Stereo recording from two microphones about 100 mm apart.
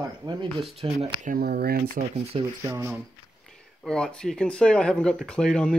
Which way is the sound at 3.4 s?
5° left (ahead or behind).